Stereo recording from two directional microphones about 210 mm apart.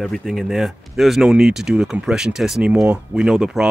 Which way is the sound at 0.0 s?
Centre (ahead or behind).